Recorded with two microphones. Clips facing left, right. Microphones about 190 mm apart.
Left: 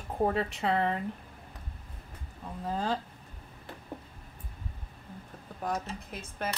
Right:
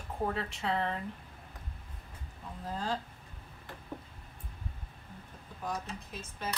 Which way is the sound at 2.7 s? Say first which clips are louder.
Left 4 dB; 65° left (ahead or behind).